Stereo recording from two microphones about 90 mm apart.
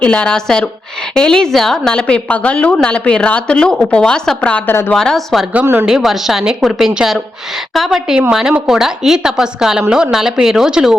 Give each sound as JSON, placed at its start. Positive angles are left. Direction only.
{"t": 0.0, "sound": "a woman's voice", "side_deg": 10}
{"t": 4.7, "sound": "a woman's voice", "side_deg": 25}
{"t": 4.9, "sound": "a woman's voice", "side_deg": 5}